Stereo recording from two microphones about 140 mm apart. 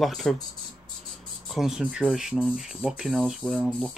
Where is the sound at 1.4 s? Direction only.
Centre (ahead or behind).